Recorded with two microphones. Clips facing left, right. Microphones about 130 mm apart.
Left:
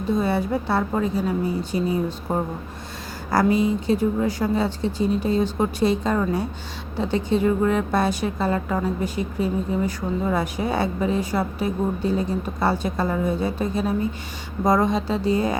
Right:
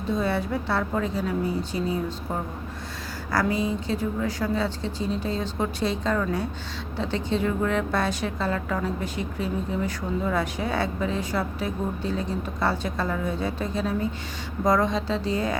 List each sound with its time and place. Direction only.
0.1 s speech: 10° left (ahead or behind)
3.3 s speech: 15° left (ahead or behind)